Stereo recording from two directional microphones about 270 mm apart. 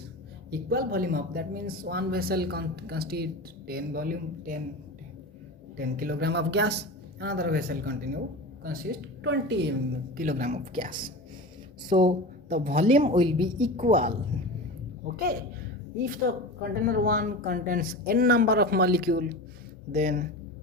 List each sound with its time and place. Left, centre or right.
0.5 s speech: right
5.7 s speech: right
11.9 s a woman's voice: centre
13.7 s a woman's voice: right
16.0 s a woman's voice: right